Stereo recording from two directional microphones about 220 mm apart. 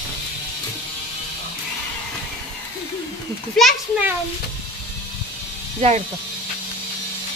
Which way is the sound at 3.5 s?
5° right (ahead or behind).